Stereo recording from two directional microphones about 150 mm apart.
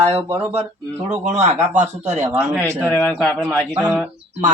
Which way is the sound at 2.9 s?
15° left (ahead or behind).